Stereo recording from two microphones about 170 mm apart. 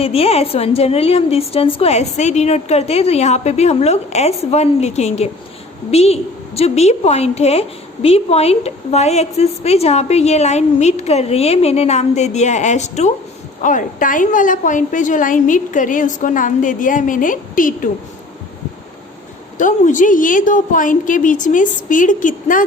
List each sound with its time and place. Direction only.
0.0 s a woman's voice: 35° left (ahead or behind); by 17.7 s 55° left (ahead or behind)
19.5 s a woman's voice: 50° left (ahead or behind)